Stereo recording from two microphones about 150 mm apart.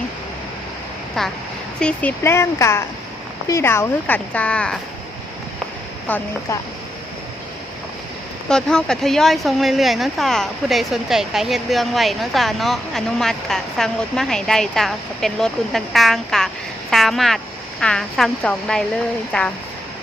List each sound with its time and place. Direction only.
1.2 s a woman's voice: centre (ahead or behind)
6.1 s a woman's voice: 10° left (ahead or behind)
8.4 s a woman's voice: 5° left (ahead or behind)